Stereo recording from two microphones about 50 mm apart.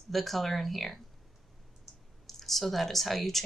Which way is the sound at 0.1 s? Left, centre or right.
Centre.